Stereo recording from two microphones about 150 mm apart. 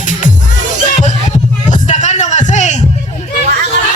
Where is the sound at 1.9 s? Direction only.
50° left (ahead or behind).